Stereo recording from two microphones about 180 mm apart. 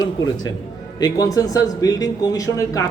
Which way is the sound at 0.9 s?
20° left (ahead or behind).